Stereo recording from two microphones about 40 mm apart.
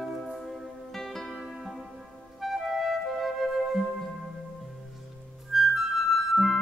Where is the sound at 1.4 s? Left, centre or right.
Centre.